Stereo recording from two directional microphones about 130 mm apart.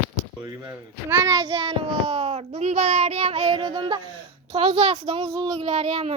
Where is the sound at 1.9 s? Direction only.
45° right (ahead or behind).